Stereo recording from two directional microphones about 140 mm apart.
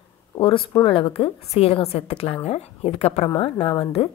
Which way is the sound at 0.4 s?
40° left (ahead or behind).